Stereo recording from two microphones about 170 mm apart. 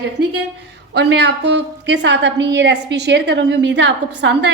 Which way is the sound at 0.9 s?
85° right.